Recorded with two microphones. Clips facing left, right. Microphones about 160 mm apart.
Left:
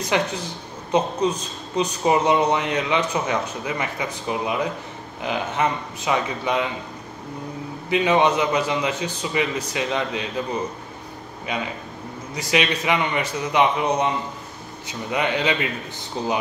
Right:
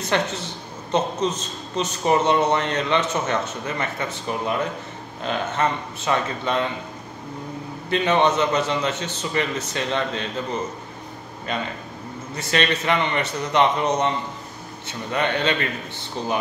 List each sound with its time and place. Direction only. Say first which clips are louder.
0.1 s speech: even; 10° left (ahead or behind)
7.9 s speech: left 1 dB; 10° left (ahead or behind)